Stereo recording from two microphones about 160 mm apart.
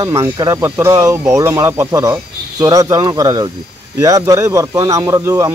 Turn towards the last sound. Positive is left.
turn(degrees=-20)  # may be behind; listen again after turning